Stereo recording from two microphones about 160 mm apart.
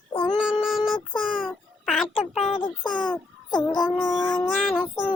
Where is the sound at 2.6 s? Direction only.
30° left (ahead or behind).